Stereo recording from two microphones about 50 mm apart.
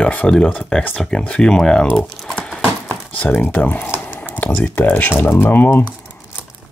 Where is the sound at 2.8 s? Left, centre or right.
Left.